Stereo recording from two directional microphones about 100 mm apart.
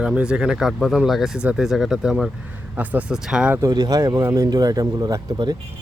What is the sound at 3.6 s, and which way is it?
Speech, 40° right (ahead or behind).